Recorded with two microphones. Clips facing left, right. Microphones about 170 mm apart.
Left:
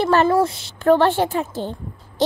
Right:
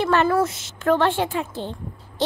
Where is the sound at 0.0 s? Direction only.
35° left (ahead or behind).